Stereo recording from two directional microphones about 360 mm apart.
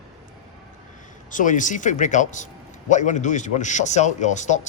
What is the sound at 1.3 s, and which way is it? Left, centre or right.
A man's voice, left.